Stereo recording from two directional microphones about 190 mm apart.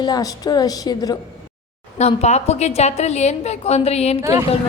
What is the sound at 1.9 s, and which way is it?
A woman's voice, 35° left (ahead or behind).